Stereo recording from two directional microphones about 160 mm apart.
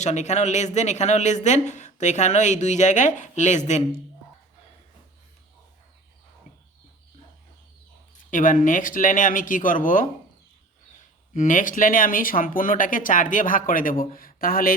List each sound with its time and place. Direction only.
0.0 s speech: 45° left (ahead or behind)
8.3 s speech: 55° left (ahead or behind)
11.3 s speech: 55° left (ahead or behind)